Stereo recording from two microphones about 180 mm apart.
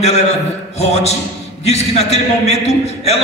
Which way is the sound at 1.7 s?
35° left (ahead or behind).